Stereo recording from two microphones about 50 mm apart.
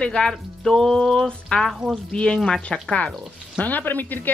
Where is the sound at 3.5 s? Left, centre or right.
Left.